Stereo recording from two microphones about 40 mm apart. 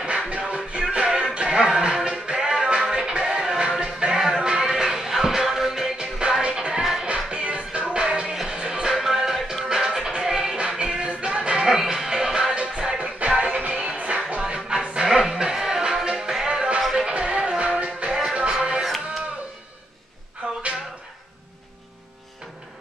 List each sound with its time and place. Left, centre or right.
0.5 s music: right
6.8 s music: centre
7.2 s music: right
11.6 s music: centre
13.0 s music: right
20.4 s a sound: right